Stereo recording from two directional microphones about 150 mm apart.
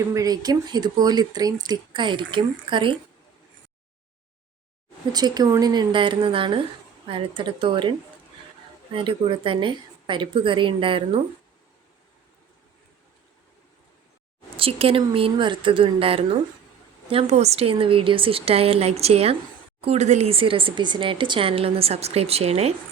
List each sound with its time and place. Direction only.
0.1 s speech: 25° right (ahead or behind)
5.1 s speech: 25° right (ahead or behind)
14.5 s speech: 40° right (ahead or behind)